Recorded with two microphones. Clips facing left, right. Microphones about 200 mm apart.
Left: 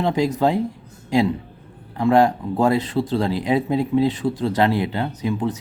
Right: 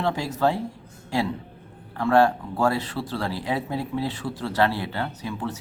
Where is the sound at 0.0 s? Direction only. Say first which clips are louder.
Left 5 dB; 20° left (ahead or behind).